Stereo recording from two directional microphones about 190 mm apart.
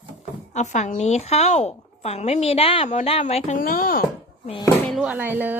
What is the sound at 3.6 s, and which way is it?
Speech, 50° left (ahead or behind).